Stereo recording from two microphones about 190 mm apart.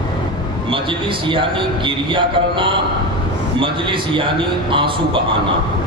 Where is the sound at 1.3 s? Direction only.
25° right (ahead or behind).